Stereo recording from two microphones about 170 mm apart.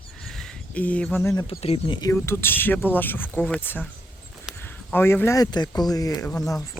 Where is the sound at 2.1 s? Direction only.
15° left (ahead or behind).